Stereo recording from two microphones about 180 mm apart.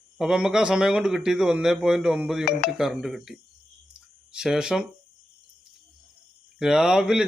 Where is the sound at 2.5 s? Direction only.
60° left (ahead or behind).